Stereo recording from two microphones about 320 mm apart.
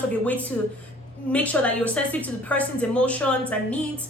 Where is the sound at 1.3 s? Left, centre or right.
Centre.